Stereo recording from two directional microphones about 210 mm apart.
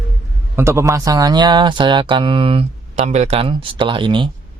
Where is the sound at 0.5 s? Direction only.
10° right (ahead or behind).